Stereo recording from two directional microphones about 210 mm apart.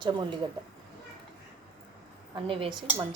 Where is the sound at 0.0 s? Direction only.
20° right (ahead or behind).